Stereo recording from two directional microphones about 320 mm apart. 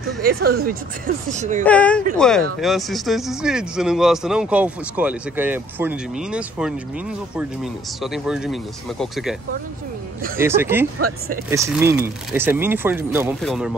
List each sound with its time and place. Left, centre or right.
0.2 s speech: right
1.6 s speech: centre
10.4 s speech: centre
11.0 s speech: right
11.5 s speech: centre